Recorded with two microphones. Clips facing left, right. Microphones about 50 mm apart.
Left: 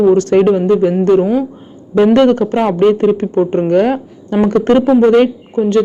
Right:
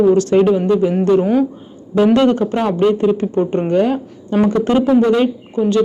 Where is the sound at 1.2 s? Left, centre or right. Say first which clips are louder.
Left 1 dB; centre.